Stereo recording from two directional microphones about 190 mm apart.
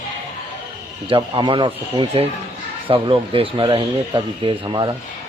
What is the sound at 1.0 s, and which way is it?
Speech, 25° right (ahead or behind).